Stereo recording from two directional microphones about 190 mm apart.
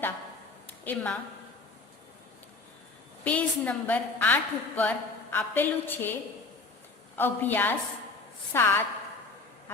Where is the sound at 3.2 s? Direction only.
10° left (ahead or behind).